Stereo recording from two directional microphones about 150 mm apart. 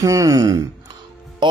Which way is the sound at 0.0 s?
20° right (ahead or behind).